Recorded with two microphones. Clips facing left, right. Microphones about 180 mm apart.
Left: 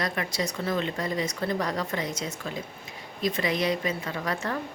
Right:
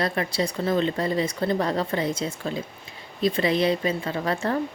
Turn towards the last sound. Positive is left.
turn(degrees=-30)  # may be behind; listen again after turning